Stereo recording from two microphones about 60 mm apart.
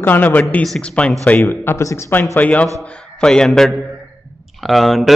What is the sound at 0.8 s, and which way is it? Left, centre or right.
Speech, centre.